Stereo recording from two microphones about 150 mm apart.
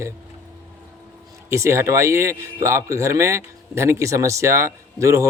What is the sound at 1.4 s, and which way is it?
Speech, 20° right (ahead or behind).